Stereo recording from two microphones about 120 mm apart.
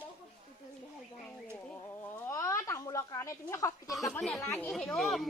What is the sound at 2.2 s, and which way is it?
Speech, 25° left (ahead or behind).